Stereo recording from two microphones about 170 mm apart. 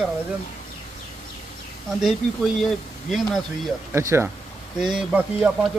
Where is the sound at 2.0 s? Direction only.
Centre (ahead or behind).